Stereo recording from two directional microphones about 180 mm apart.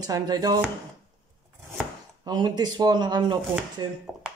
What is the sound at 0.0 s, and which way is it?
Speech, 20° right (ahead or behind).